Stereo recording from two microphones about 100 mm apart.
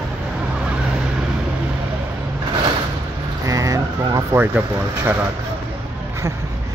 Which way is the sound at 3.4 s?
35° right (ahead or behind).